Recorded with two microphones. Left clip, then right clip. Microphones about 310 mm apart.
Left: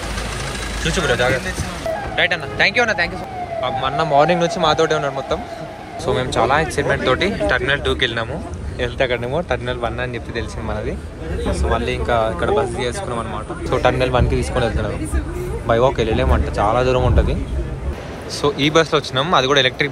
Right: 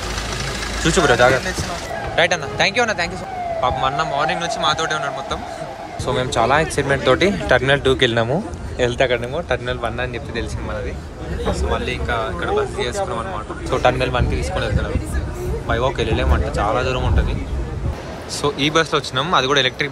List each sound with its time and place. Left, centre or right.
0.8 s speech: right; by 17.4 s centre
18.4 s speech: centre